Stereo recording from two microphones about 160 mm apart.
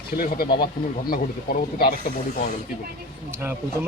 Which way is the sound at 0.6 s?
65° left (ahead or behind).